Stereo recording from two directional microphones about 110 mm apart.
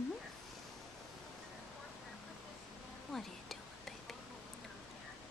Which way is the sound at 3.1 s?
Centre (ahead or behind).